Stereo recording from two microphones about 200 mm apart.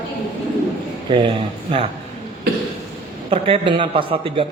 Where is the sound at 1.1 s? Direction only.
25° right (ahead or behind).